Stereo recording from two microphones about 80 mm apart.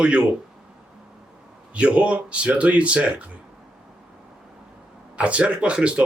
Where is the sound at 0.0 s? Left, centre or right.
Centre.